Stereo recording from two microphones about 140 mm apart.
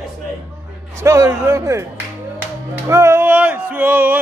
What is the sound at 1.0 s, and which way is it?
Speech, 20° right (ahead or behind).